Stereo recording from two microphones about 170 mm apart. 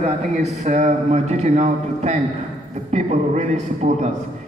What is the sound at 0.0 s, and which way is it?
A man's voice, 40° right (ahead or behind).